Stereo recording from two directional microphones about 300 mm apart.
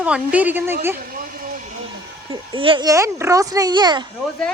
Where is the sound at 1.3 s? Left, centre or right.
Right.